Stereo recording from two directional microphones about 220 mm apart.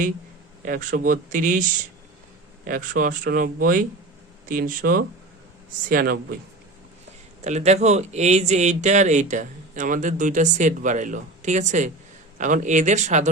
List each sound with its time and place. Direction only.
0.6 s speech: 40° right (ahead or behind)
2.6 s speech: 40° right (ahead or behind)
7.4 s speech: 30° right (ahead or behind)